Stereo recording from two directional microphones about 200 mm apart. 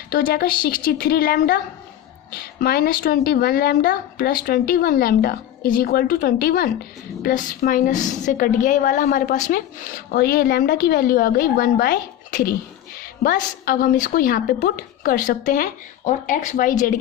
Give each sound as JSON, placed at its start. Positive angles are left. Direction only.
{"t": 0.1, "sound": "a woman's voice", "side_deg": 45}